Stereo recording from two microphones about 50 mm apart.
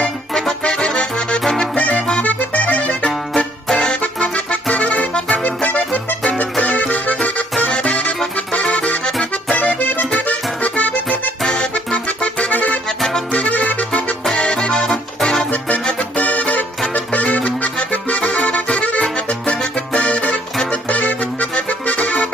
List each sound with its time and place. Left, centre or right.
0.3 s music: centre
1.8 s accordion: left
3.1 s music: centre; by 8.1 s left
8.7 s accordion: left
9.6 s accordion: left
10.2 s music: left
11.1 s accordion: centre
13.3 s music: left
14.3 s music: centre
16.2 s music: left
16.9 s accordion: left
19.4 s music: left
20.9 s accordion: left